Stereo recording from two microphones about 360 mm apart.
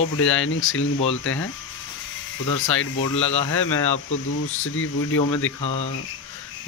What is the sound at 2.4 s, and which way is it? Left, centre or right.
Speech, left.